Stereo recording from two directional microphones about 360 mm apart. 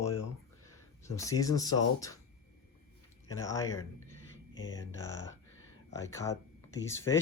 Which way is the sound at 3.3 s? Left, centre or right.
Centre.